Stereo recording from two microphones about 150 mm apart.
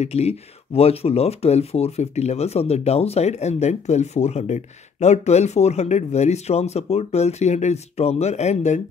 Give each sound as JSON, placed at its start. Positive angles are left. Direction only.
{"t": 0.0, "sound": "speech", "side_deg": 45}